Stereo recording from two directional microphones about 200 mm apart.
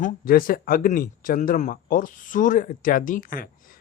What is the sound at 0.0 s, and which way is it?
A man's voice, 45° left (ahead or behind).